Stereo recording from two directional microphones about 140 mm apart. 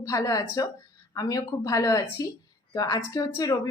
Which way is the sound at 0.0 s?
25° left (ahead or behind).